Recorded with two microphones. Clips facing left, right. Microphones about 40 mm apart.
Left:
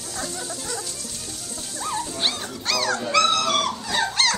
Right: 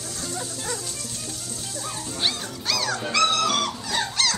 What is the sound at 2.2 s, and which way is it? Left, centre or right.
Dog, centre.